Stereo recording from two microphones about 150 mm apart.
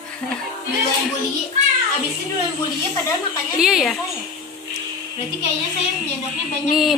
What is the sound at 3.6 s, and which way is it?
Speech, centre (ahead or behind).